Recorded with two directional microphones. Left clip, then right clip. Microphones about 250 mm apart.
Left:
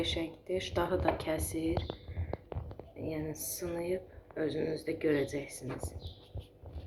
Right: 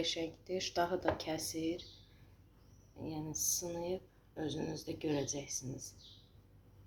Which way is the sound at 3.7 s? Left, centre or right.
Right.